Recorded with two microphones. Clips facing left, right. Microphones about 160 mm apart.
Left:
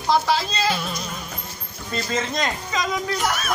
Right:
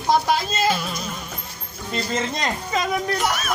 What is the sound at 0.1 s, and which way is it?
Speech, 50° right (ahead or behind).